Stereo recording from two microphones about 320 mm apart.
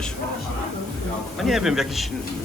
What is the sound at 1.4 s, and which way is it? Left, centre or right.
Speech, centre.